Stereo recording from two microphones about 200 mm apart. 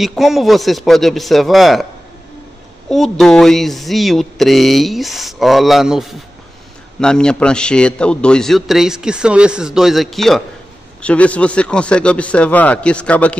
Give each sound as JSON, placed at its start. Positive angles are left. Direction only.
{"t": 0.0, "sound": "a man's voice", "side_deg": 0}
{"t": 2.9, "sound": "a man's voice", "side_deg": 0}